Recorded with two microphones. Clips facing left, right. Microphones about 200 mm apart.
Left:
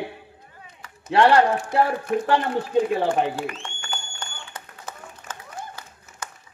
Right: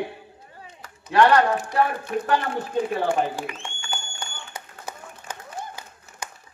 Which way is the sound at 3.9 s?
10° right (ahead or behind).